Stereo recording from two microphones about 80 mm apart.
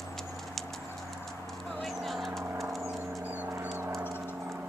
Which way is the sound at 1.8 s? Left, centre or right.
Centre.